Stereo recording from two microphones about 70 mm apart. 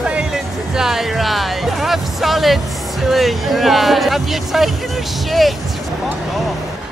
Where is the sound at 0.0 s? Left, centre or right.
Centre.